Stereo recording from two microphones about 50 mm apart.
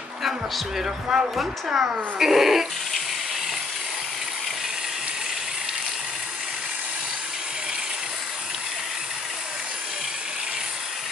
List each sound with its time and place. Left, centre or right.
1.0 s speech: centre